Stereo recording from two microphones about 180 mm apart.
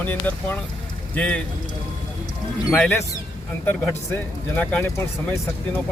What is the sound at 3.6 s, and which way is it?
Speech, 10° left (ahead or behind).